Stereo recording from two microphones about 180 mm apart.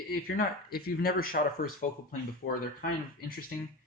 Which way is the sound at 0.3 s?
55° left (ahead or behind).